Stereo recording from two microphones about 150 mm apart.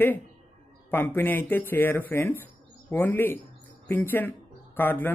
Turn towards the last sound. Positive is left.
turn(degrees=15)  # may be behind; listen again after turning